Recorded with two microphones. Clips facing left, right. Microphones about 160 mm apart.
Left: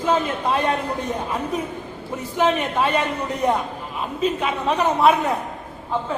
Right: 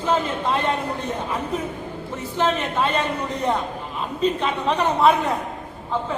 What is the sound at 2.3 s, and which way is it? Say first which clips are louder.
Speech: left 2 dB; 10° left (ahead or behind).